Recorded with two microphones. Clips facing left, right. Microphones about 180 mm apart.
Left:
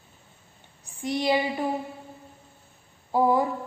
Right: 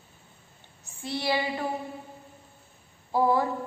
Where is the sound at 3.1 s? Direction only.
15° left (ahead or behind).